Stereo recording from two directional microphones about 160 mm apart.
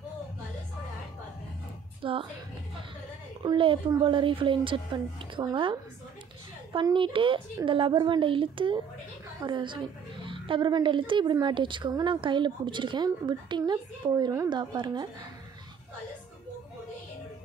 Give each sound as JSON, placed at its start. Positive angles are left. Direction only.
{"t": 2.0, "sound": "a woman's voice", "side_deg": -35}
{"t": 3.4, "sound": "a woman's voice", "side_deg": -30}